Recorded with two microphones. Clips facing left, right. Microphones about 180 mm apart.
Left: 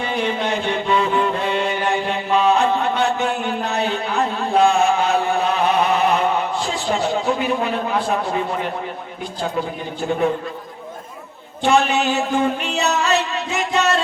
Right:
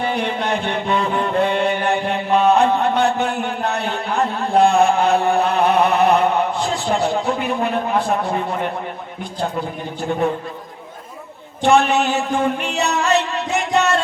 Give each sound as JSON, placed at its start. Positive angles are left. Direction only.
{"t": 0.0, "sound": "music", "side_deg": -55}
{"t": 3.7, "sound": "a sound", "side_deg": -55}
{"t": 11.6, "sound": "music", "side_deg": -55}